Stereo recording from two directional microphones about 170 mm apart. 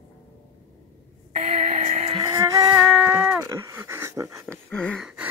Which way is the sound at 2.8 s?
10° right (ahead or behind).